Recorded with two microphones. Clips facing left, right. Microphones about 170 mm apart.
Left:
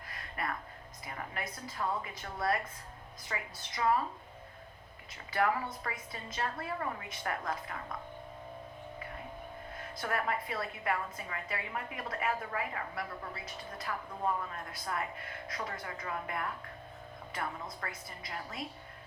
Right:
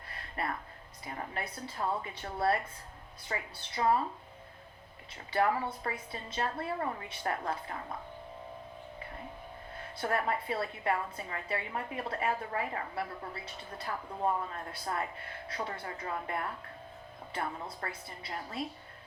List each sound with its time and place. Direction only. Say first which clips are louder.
0.1 s music: right 2 dB; 30° right (ahead or behind)
1.0 s a woman's voice: right 2 dB; 30° right (ahead or behind)
5.3 s a woman's voice: right 2 dB; 30° right (ahead or behind)
10.0 s a woman's voice: right 3 dB; 30° right (ahead or behind)